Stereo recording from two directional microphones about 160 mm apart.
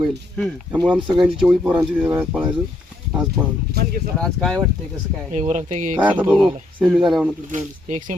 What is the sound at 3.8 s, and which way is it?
Speech, 80° right.